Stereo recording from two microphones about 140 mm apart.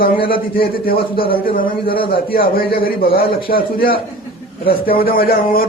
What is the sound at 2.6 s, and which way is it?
Speech, 90° left.